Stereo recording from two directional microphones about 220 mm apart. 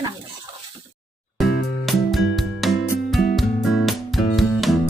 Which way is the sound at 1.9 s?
Centre (ahead or behind).